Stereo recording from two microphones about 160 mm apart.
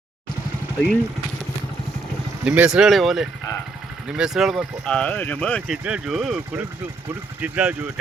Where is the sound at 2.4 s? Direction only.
5° right (ahead or behind).